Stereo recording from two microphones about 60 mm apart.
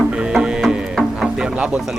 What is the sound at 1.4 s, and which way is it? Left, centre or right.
Music, centre.